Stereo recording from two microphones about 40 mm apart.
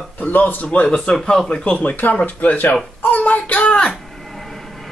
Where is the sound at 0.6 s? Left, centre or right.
Left.